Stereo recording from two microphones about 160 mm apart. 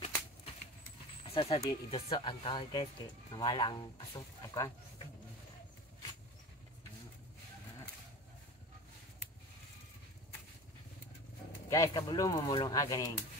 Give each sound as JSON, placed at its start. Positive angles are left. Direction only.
{"t": 1.2, "sound": "speech", "side_deg": 35}
{"t": 11.7, "sound": "speech", "side_deg": 25}